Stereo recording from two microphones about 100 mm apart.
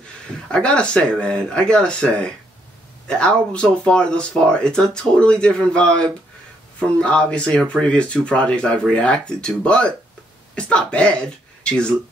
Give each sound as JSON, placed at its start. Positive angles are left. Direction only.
{"t": 0.5, "sound": "speech", "side_deg": 10}